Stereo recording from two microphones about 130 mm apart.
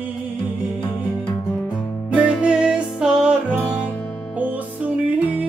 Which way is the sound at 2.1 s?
10° right (ahead or behind).